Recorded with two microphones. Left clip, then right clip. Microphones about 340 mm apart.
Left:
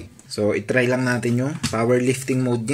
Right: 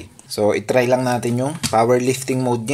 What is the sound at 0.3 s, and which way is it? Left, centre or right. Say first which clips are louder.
Speech: right 4 dB; centre.